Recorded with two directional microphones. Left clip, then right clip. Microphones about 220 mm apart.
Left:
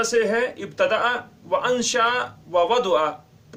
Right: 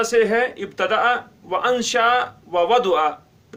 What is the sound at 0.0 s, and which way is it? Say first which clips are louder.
A man's voice: right 3 dB; 25° right (ahead or behind).